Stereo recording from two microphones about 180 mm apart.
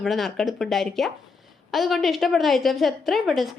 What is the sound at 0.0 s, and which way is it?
A woman's voice, centre (ahead or behind).